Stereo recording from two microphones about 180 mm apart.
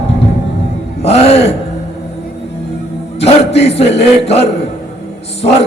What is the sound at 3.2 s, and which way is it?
A man's voice, 35° left (ahead or behind).